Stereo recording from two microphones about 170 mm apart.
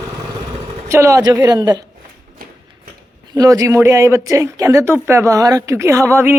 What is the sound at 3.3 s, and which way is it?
Speech, 20° right (ahead or behind).